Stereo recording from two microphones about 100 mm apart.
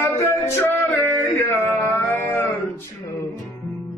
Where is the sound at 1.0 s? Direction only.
20° left (ahead or behind).